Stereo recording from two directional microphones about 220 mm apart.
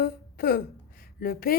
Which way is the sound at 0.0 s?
40° left (ahead or behind).